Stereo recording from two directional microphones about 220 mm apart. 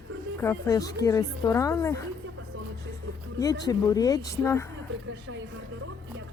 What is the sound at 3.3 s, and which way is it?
A woman's voice, 15° left (ahead or behind).